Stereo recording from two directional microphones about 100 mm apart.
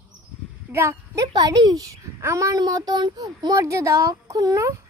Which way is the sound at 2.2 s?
30° right (ahead or behind).